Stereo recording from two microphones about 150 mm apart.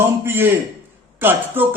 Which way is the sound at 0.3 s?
15° right (ahead or behind).